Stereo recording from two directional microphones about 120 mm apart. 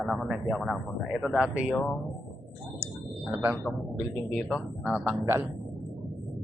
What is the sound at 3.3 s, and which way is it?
Speech, 15° right (ahead or behind).